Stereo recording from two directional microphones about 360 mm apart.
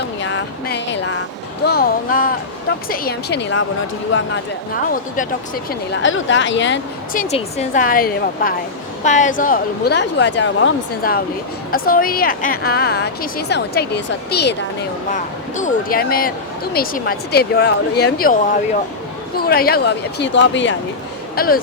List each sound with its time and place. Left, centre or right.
0.2 s a woman's voice: left
19.4 s a woman's voice: left